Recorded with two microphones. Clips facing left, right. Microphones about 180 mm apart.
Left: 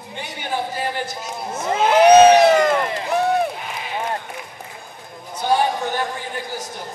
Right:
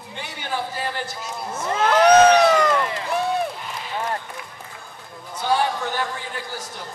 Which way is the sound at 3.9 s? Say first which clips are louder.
Left 1 dB; 20° left (ahead or behind).